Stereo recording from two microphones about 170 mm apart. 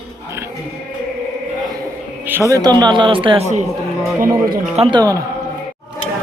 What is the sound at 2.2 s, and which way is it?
Speech, 15° right (ahead or behind).